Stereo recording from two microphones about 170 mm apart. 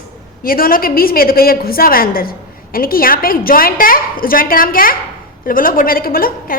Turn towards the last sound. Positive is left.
turn(degrees=60)  # may be behind; listen again after turning